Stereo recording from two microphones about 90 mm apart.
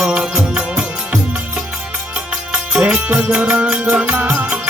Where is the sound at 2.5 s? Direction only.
10° right (ahead or behind).